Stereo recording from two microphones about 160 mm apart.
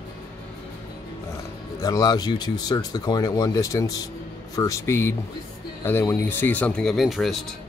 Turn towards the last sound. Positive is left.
turn(degrees=0)  # may be behind; listen again after turning